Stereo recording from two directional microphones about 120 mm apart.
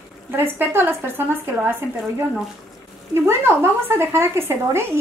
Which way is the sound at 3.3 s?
20° right (ahead or behind).